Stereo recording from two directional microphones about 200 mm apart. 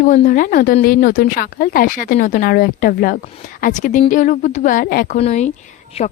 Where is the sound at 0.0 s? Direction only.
40° left (ahead or behind).